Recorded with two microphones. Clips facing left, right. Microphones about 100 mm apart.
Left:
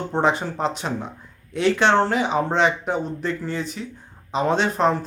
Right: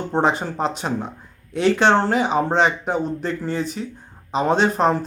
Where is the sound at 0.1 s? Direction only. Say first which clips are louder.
Right 1 dB; 40° right (ahead or behind).